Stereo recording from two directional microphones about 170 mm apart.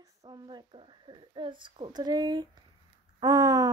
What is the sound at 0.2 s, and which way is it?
Speech, 25° right (ahead or behind).